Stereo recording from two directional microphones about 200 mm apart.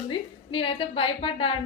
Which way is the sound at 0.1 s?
25° left (ahead or behind).